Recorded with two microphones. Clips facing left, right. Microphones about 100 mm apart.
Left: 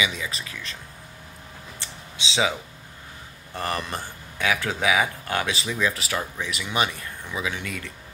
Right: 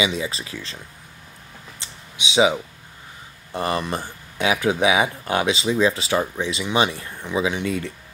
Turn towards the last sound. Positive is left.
turn(degrees=-30)  # may be behind; listen again after turning